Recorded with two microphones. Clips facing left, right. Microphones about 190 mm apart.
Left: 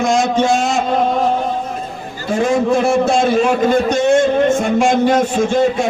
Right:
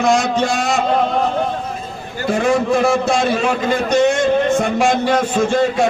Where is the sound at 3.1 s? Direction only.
50° left (ahead or behind).